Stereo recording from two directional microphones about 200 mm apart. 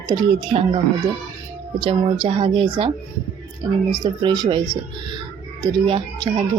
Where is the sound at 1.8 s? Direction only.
25° right (ahead or behind).